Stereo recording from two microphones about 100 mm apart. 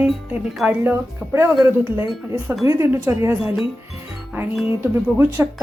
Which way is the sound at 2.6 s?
25° right (ahead or behind).